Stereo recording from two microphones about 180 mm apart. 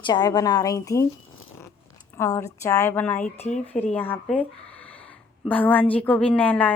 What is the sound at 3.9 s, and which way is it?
Speech, 10° left (ahead or behind).